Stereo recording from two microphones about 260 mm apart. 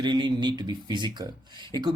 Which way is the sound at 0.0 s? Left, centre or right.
Centre.